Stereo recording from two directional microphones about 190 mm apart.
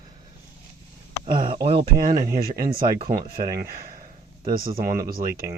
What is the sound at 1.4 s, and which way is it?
Speech, 30° right (ahead or behind).